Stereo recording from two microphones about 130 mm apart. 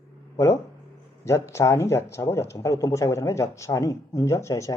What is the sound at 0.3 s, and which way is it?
Speech, 20° left (ahead or behind).